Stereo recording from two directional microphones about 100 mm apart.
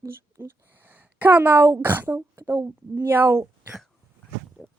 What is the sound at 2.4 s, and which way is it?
Speech, 30° right (ahead or behind).